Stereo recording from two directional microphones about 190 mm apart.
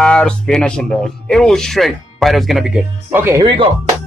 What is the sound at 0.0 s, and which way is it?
Speech, 5° left (ahead or behind).